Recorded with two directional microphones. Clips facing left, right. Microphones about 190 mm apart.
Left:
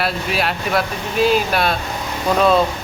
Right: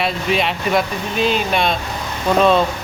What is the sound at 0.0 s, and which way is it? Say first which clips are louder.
Speech: right 2 dB; 5° left (ahead or behind).